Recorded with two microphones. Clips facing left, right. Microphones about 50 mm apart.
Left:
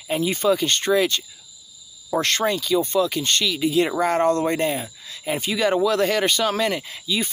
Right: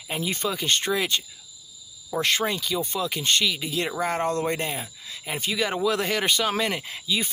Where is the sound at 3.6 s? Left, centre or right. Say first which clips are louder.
Left 7 dB; centre.